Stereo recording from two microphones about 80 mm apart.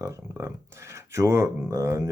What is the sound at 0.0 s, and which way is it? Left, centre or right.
Speech, right.